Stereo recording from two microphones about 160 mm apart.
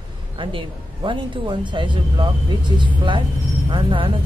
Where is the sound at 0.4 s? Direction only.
30° right (ahead or behind).